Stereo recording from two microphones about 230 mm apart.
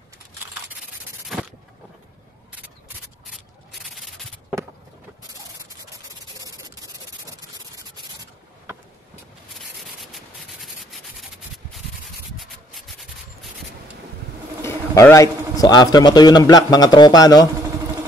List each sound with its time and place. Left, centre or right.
1.3 s a sound: centre
3.7 s rub: centre
6.4 s rub: centre
10.1 s rub: centre
14.6 s a man's voice: centre